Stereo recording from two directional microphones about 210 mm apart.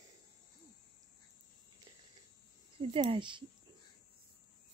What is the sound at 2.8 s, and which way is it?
Speech, 25° right (ahead or behind).